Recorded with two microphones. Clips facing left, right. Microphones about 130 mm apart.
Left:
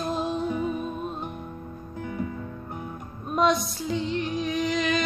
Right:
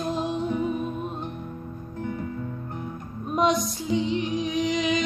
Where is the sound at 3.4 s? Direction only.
15° right (ahead or behind).